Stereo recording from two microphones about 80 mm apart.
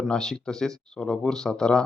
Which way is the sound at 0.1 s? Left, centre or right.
Centre.